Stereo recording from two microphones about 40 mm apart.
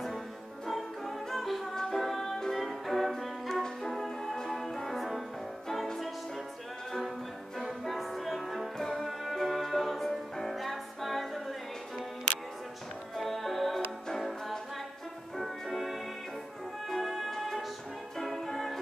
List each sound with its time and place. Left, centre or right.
0.7 s music: centre
7.5 s music: centre
13.1 s music: centre